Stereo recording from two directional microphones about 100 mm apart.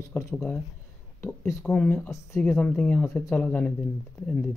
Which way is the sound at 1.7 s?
15° left (ahead or behind).